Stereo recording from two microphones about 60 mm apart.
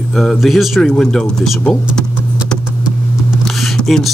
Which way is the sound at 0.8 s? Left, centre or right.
Centre.